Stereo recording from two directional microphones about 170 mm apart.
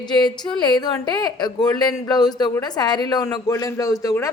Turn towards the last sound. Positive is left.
turn(degrees=20)  # may be behind; listen again after turning